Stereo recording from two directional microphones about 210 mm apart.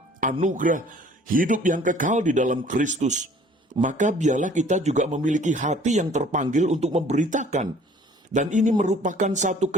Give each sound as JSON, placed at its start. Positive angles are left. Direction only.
{"t": 0.3, "sound": "speech", "side_deg": -35}